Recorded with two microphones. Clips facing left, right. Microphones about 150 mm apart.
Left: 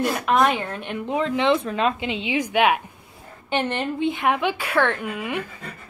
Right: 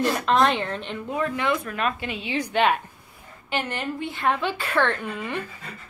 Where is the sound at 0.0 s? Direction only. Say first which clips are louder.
Left 1 dB; 10° left (ahead or behind).